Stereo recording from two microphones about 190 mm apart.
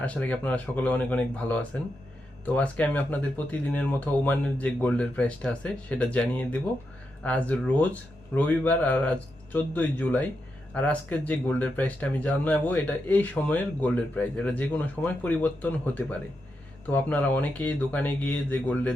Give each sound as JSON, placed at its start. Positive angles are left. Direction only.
{"t": 0.0, "sound": "speech", "side_deg": 5}